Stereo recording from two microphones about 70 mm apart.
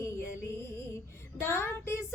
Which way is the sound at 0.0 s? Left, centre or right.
Left.